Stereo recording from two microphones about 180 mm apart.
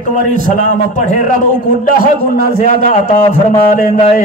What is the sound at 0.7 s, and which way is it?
Music, 45° left (ahead or behind).